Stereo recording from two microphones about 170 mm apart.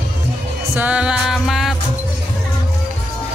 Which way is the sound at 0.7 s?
10° right (ahead or behind).